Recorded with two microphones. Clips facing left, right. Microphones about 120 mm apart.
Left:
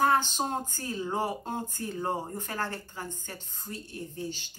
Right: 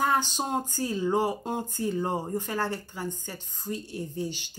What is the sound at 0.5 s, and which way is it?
Speech, 15° right (ahead or behind).